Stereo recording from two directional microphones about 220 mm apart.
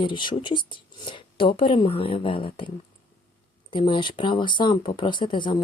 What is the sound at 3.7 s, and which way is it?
Speech, 20° left (ahead or behind).